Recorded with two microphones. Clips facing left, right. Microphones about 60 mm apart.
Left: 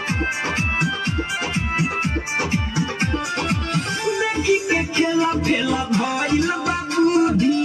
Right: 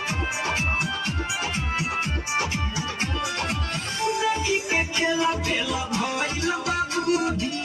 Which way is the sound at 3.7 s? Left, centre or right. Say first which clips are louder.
Left 4 dB; left.